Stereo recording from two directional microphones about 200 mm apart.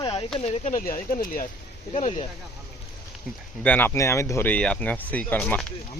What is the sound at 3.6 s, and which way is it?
Speech, 10° left (ahead or behind).